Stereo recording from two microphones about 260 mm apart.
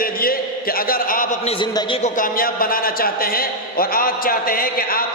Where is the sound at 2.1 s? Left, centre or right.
Left.